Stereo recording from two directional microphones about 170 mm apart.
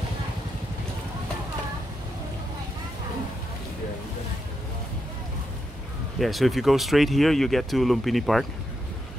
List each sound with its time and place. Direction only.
6.1 s speech: centre (ahead or behind)